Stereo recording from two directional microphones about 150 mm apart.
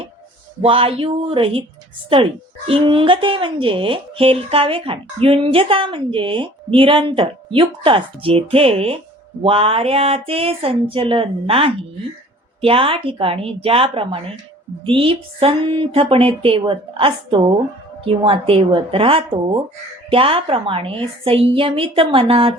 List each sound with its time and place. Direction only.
0.6 s speech: 40° right (ahead or behind)